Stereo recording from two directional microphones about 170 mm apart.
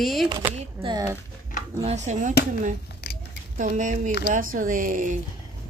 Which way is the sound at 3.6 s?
50° right (ahead or behind).